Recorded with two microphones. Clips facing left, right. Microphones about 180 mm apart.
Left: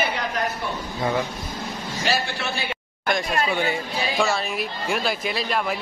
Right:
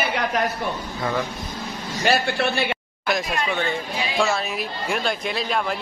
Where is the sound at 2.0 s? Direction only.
65° right (ahead or behind).